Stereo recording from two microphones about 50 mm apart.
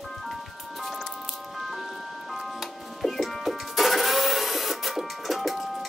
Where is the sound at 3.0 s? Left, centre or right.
Centre.